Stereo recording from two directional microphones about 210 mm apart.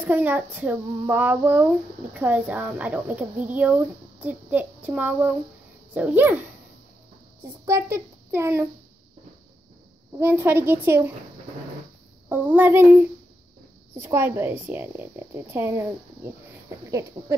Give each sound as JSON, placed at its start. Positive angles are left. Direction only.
{"t": 0.0, "sound": "a woman's voice", "side_deg": -10}
{"t": 7.6, "sound": "a woman's voice", "side_deg": -15}
{"t": 10.1, "sound": "a woman's voice", "side_deg": -10}
{"t": 12.3, "sound": "a woman's voice", "side_deg": -10}
{"t": 17.2, "sound": "speech", "side_deg": -30}